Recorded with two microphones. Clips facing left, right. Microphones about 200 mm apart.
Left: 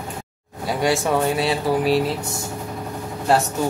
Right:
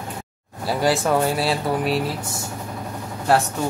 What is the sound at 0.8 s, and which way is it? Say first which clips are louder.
Speech: even; centre (ahead or behind).